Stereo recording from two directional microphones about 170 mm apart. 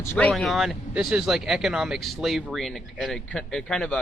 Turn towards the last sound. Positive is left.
turn(degrees=5)  # may be behind; listen again after turning